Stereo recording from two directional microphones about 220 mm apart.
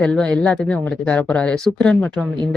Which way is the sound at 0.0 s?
5° left (ahead or behind).